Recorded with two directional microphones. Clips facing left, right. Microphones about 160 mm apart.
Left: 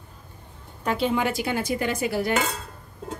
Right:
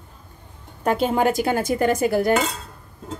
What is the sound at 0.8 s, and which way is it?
A woman's voice, 45° right (ahead or behind).